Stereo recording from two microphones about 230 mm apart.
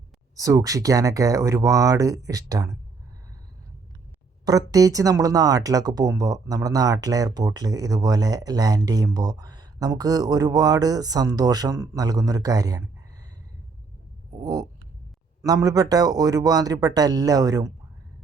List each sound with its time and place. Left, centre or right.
0.3 s speech: centre
4.4 s speech: centre
14.4 s speech: centre